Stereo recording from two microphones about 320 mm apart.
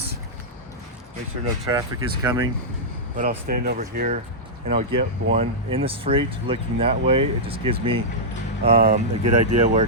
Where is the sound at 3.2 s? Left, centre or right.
Right.